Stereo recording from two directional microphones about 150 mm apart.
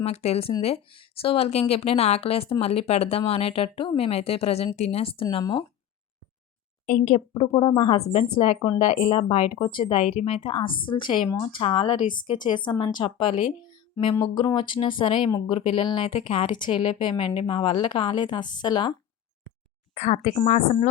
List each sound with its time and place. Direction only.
0.0 s a woman's voice: 45° left (ahead or behind)
6.8 s speech: 50° left (ahead or behind)
7.5 s a woman's voice: 30° left (ahead or behind)
19.9 s speech: 45° left (ahead or behind)